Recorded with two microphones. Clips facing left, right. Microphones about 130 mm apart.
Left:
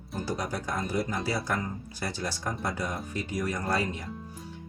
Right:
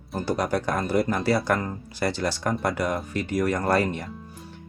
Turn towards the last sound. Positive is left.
turn(degrees=-65)  # may be behind; listen again after turning